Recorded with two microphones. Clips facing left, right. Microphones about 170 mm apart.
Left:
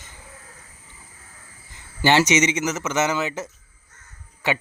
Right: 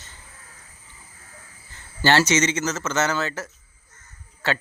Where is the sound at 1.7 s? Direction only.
15° left (ahead or behind).